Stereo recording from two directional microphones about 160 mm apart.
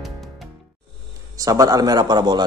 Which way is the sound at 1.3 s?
20° right (ahead or behind).